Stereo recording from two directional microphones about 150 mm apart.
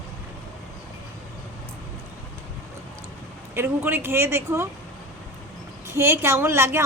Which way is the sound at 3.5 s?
15° right (ahead or behind).